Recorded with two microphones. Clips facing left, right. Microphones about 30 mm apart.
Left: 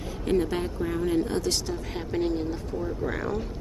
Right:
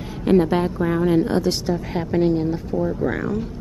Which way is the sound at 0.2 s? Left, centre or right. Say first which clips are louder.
Right 9 dB; right.